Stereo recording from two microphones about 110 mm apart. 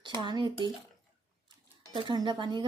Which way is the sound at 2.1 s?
45° right (ahead or behind).